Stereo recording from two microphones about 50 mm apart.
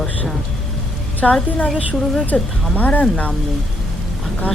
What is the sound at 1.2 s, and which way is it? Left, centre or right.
Speech, centre.